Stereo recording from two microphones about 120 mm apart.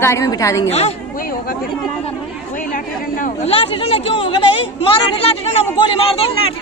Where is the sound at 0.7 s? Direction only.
60° left (ahead or behind).